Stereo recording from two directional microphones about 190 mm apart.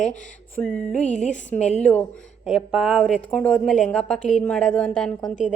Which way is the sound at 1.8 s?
5° left (ahead or behind).